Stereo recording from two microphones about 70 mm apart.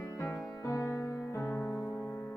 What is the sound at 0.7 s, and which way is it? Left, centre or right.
Music, left.